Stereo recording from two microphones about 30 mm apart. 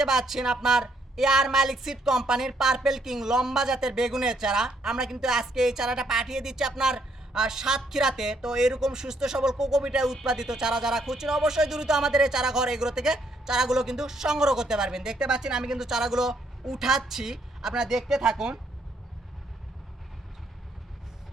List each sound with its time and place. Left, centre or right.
0.0 s a woman's voice: centre